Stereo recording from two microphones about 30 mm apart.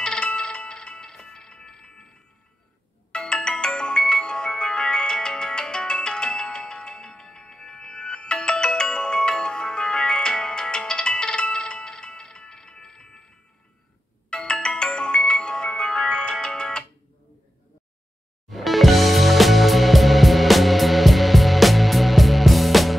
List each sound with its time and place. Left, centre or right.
0.0 s music: left
3.1 s music: left
7.7 s ringtone: left
12.4 s music: left
14.3 s music: left
18.5 s music: centre